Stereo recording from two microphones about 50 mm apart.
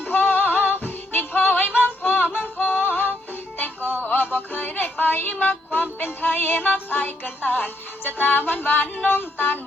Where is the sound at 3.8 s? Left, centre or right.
Right.